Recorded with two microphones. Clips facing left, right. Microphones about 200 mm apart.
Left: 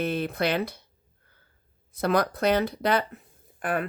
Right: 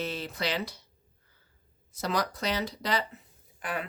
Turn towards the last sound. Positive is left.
turn(degrees=50)  # may be behind; listen again after turning